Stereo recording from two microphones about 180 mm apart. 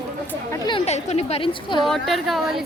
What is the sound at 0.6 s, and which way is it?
A woman's voice, 30° left (ahead or behind).